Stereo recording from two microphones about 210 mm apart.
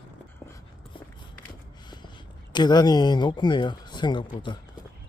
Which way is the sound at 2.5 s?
20° left (ahead or behind).